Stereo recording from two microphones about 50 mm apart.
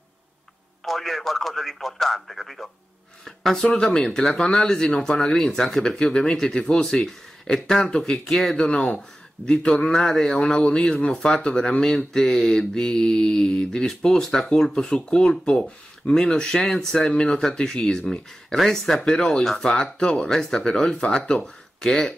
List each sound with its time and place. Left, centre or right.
0.8 s speech: centre
3.7 s speech: centre
5.2 s speech: centre
8.5 s speech: centre
15.0 s speech: centre
17.1 s speech: centre
19.7 s speech: centre